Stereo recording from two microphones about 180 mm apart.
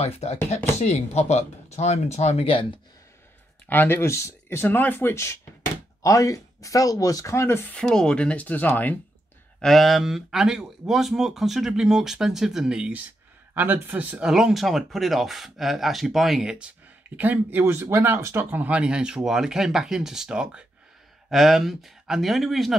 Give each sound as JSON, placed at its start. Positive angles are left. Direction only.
{"t": 0.0, "sound": "speech", "side_deg": 35}
{"t": 3.6, "sound": "speech", "side_deg": 10}